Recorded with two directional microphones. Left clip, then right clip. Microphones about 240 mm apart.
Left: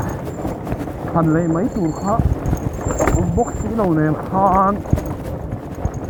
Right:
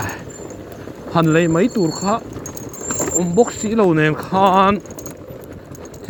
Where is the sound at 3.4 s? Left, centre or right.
Right.